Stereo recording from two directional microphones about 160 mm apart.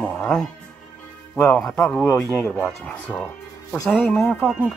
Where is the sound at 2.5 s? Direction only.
10° left (ahead or behind).